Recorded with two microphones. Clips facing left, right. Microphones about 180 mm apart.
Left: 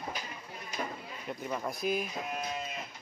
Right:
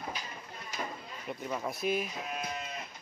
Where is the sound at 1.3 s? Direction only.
Centre (ahead or behind).